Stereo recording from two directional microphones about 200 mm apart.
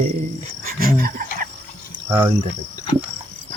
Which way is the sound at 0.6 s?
45° right (ahead or behind).